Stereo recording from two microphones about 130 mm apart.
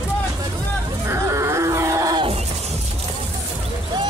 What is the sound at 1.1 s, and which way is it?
Groan, 20° right (ahead or behind).